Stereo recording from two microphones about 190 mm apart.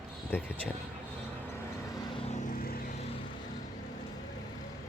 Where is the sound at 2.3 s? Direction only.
40° left (ahead or behind).